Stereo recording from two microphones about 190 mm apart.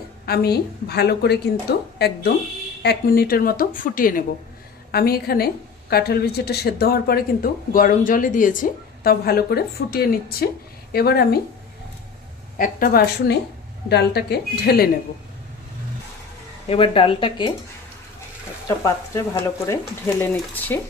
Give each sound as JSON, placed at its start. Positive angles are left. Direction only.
{"t": 0.3, "sound": "a woman's voice", "side_deg": 55}
{"t": 12.5, "sound": "a woman's voice", "side_deg": 45}
{"t": 16.6, "sound": "speech", "side_deg": 30}
{"t": 18.7, "sound": "speech", "side_deg": 15}